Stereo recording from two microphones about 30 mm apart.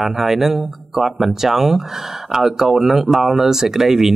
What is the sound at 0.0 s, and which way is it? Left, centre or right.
Speech, centre.